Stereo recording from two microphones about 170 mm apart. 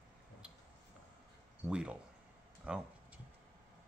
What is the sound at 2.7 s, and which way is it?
Tick-tock, 5° right (ahead or behind).